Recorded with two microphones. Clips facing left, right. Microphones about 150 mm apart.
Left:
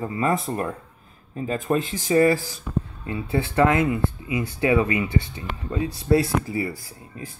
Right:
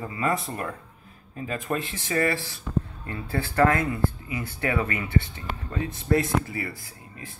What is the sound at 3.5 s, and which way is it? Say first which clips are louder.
Speech: left 2 dB; 10° left (ahead or behind).